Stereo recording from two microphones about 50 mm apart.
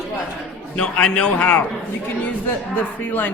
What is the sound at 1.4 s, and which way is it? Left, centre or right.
Speech, left.